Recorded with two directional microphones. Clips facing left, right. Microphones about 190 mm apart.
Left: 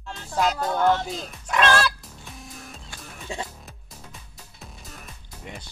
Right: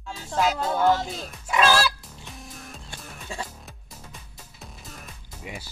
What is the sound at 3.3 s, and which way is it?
Music, 20° left (ahead or behind).